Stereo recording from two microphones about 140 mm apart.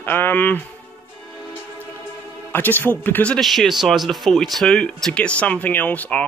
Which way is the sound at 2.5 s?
15° left (ahead or behind).